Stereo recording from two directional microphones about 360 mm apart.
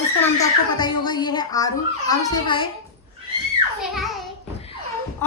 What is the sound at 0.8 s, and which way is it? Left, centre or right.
A child's voice, centre.